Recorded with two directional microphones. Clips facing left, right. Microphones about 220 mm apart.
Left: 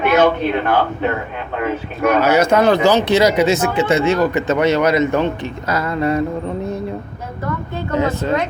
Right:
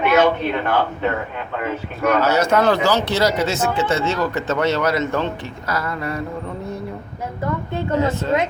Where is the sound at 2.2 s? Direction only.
15° left (ahead or behind).